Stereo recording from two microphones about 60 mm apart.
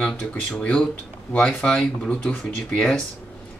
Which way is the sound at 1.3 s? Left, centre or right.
Centre.